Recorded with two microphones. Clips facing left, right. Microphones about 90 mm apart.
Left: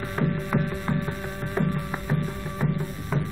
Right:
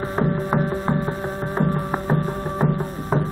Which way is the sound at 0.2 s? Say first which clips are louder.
Right 4 dB; 35° right (ahead or behind).